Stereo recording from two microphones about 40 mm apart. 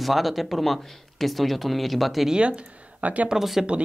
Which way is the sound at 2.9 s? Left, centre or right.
Right.